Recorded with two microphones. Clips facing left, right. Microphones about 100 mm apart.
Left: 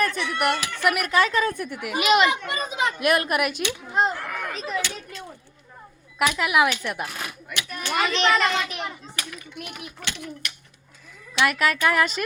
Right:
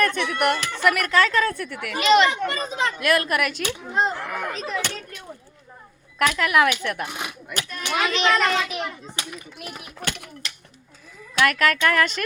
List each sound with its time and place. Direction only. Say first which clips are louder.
0.0 s speech: right 2 dB; 55° right (ahead or behind)
0.6 s a child's voice: right 2 dB; 10° left (ahead or behind)
3.9 s a child's voice: even; centre (ahead or behind)
4.3 s speech: right 2 dB; 10° right (ahead or behind)
4.5 s a child's voice: even; centre (ahead or behind)
6.1 s a child's voice: right 1 dB; 10° left (ahead or behind)
7.1 s a child's voice: right 2 dB; 20° right (ahead or behind)
7.6 s a child's voice: left 2 dB; 15° left (ahead or behind)
7.9 s a child's voice: even; centre (ahead or behind)
9.1 s a child's voice: right 1 dB; 30° right (ahead or behind)
10.0 s speech: right 4 dB; 50° right (ahead or behind)
11.4 s a child's voice: right 1 dB; 10° left (ahead or behind)